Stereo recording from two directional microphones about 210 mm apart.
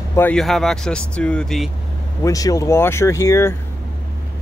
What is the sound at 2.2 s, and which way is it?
Speech, 15° left (ahead or behind).